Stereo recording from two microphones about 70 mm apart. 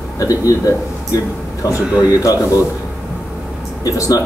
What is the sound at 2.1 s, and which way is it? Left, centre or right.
Speech, left.